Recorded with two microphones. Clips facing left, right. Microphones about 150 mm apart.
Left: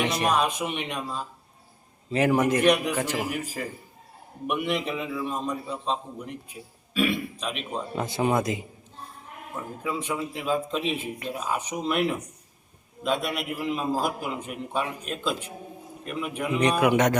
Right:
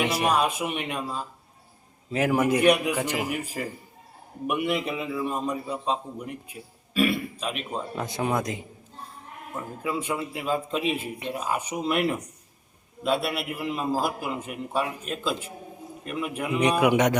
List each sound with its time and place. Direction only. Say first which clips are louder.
0.0 s a man's voice: right 1 dB; 5° right (ahead or behind)
4.4 s a man's voice: right 1 dB; 5° right (ahead or behind)